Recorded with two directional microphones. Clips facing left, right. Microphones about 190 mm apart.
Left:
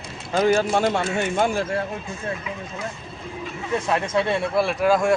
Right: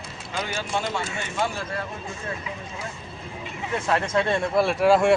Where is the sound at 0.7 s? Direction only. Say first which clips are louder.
Left 7 dB; 55° left (ahead or behind).